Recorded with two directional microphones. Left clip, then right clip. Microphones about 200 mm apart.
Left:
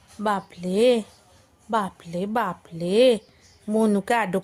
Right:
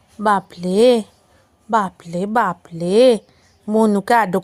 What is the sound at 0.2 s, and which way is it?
Speech, 25° right (ahead or behind).